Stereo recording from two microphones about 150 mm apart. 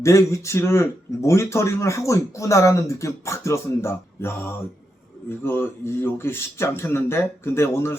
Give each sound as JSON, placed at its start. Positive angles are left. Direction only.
{"t": 0.0, "sound": "a man's voice", "side_deg": 20}